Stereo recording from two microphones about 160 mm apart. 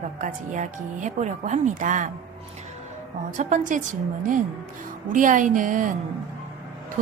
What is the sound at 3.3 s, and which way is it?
Speech, 50° right (ahead or behind).